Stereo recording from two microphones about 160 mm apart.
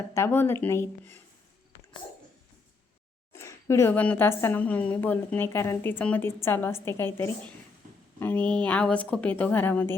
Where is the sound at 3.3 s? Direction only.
15° left (ahead or behind).